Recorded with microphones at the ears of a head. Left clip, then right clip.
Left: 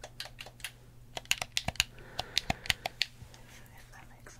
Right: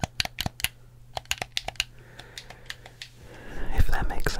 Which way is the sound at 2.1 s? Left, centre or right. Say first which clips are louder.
Left 10 dB; left.